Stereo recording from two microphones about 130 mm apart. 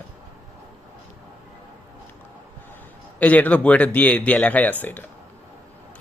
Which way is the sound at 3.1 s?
10° left (ahead or behind).